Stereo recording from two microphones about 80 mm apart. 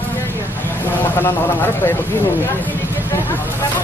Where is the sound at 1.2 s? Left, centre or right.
Left.